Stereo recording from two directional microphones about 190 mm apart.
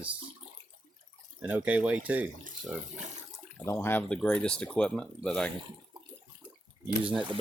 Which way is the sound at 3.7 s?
15° left (ahead or behind).